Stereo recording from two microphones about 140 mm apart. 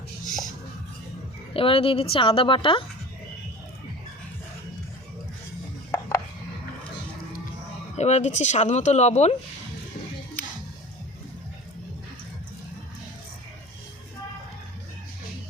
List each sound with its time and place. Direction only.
1.5 s speech: 40° left (ahead or behind)
5.9 s chopping: 20° left (ahead or behind)
7.9 s speech: 55° left (ahead or behind)
10.4 s music: 10° left (ahead or behind)